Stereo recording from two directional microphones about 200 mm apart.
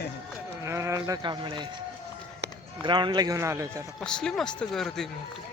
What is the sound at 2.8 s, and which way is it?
Speech, 25° right (ahead or behind).